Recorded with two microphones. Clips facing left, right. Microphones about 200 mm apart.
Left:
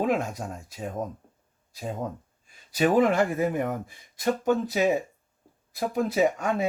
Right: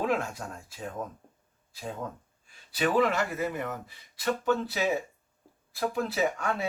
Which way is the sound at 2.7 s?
45° left (ahead or behind).